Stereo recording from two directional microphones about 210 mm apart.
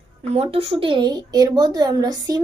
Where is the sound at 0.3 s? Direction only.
30° right (ahead or behind).